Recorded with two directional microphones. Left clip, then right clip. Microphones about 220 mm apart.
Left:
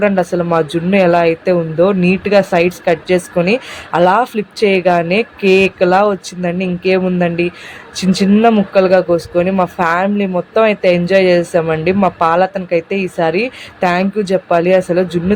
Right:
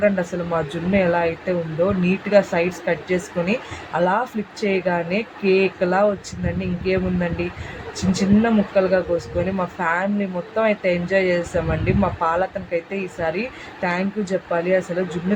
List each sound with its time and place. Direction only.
0.0 s speech: 45° left (ahead or behind)